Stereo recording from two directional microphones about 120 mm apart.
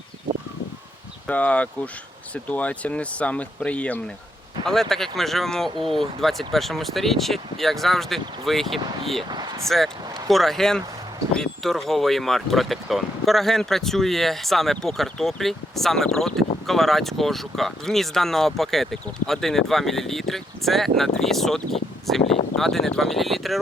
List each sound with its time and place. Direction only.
1.3 s speech: 10° left (ahead or behind)
9.6 s speech: centre (ahead or behind)
22.2 s speech: 55° left (ahead or behind)
22.5 s speech: centre (ahead or behind)